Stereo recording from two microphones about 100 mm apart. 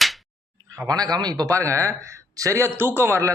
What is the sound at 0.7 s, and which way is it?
A man's voice, 40° right (ahead or behind).